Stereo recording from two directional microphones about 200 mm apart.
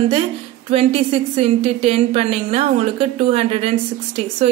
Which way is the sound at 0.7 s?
30° right (ahead or behind).